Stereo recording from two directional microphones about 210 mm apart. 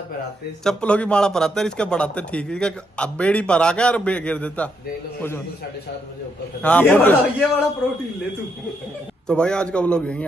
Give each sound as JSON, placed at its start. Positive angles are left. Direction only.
{"t": 0.7, "sound": "a man's voice", "side_deg": 5}
{"t": 6.6, "sound": "a man's voice", "side_deg": 5}
{"t": 9.3, "sound": "a man's voice", "side_deg": 5}